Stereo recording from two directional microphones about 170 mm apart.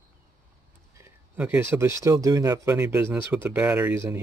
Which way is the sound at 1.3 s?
10° right (ahead or behind).